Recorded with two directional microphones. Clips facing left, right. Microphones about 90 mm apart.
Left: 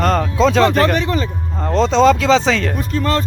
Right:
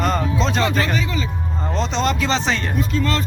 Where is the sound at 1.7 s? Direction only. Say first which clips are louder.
Left 10 dB; 90° left.